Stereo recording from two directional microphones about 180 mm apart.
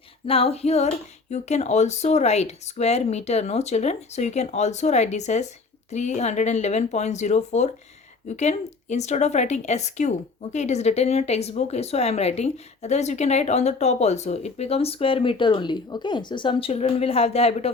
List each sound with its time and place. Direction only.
0.3 s a woman's voice: 30° left (ahead or behind)